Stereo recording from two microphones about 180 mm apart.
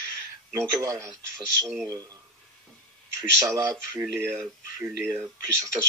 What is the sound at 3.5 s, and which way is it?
Speech, 15° right (ahead or behind).